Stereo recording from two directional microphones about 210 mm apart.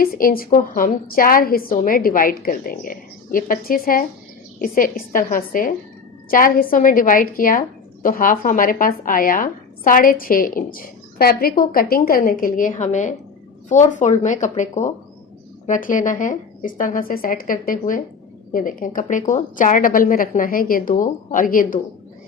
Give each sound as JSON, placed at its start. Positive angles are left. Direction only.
{"t": 0.0, "sound": "a woman's voice", "side_deg": 45}